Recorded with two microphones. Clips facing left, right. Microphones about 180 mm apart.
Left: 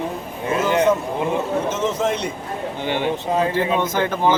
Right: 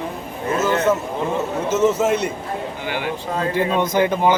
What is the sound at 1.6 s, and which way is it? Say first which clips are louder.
Speech: right 4 dB; 10° right (ahead or behind).